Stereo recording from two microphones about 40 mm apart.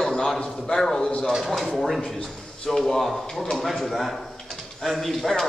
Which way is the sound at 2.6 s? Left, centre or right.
Centre.